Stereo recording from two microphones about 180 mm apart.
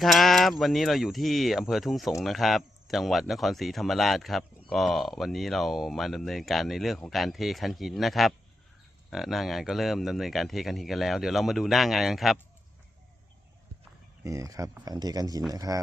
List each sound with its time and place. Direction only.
0.0 s a sound: centre (ahead or behind)
0.6 s speech: centre (ahead or behind)
14.3 s speech: 20° right (ahead or behind)